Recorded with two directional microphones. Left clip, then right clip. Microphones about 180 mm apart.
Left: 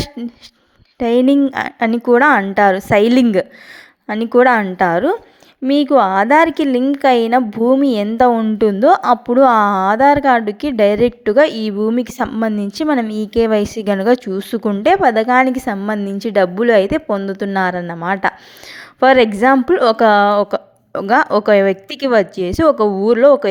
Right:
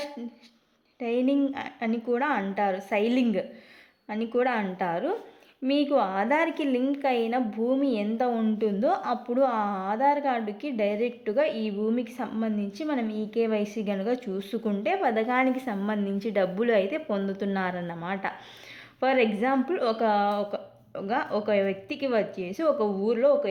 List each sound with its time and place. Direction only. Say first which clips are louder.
0.2 s a woman's voice: left 12 dB; 40° left (ahead or behind)
8.5 s a woman's voice: left 14 dB; 45° left (ahead or behind)